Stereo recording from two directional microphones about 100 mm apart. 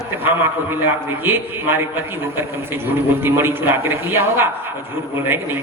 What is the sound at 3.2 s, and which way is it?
A man's voice, 25° right (ahead or behind).